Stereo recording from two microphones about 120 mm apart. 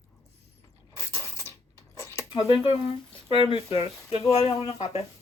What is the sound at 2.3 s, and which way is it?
Speech, 45° left (ahead or behind).